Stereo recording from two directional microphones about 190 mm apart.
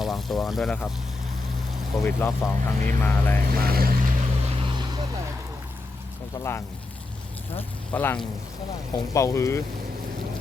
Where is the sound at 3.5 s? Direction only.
50° right (ahead or behind).